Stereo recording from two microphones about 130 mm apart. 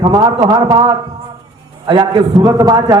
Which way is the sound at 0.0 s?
35° right (ahead or behind).